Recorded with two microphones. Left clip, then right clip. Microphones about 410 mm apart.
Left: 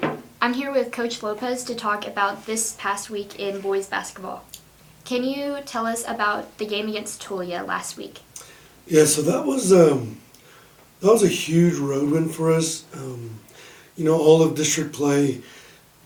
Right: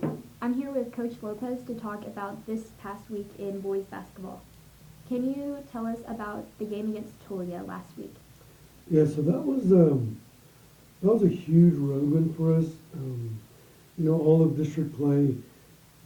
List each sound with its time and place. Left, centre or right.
0.0 s speech: centre
8.9 s speech: centre
11.0 s speech: centre
14.2 s speech: centre
14.5 s speech: centre